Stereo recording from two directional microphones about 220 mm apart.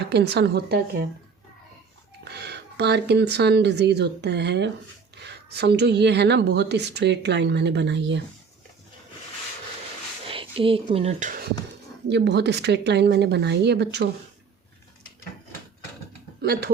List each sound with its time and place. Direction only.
0.1 s a woman's voice: 50° right (ahead or behind)
2.2 s a woman's voice: 50° right (ahead or behind)
10.2 s speech: 25° right (ahead or behind)
12.0 s a woman's voice: 50° right (ahead or behind)
16.4 s speech: 45° right (ahead or behind)